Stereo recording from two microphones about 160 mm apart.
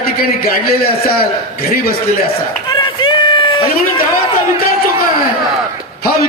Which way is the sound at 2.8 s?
30° left (ahead or behind).